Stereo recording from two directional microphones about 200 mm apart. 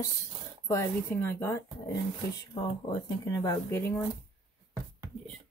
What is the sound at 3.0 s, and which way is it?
Speech, 20° left (ahead or behind).